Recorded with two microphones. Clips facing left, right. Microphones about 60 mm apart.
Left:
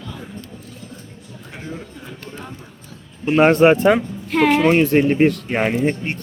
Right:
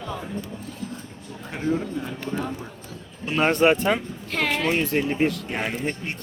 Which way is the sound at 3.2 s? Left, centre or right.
Left.